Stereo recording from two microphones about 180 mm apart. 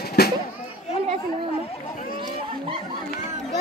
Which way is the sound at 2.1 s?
25° right (ahead or behind).